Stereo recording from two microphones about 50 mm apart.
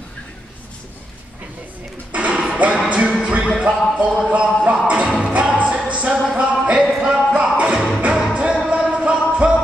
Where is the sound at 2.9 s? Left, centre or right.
Right.